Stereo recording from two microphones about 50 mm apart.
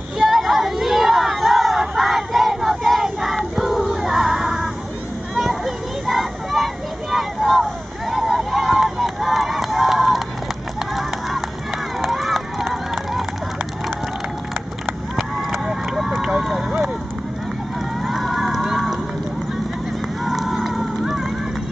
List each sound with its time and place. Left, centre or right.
0.2 s a sound: centre
6.0 s vehicle: centre
11.0 s a sound: centre
12.0 s run: centre
15.6 s run: centre
16.3 s vehicle: centre
18.0 s crowd: centre
20.2 s run: centre